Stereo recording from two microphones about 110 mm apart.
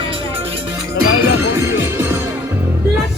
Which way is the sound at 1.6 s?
25° right (ahead or behind).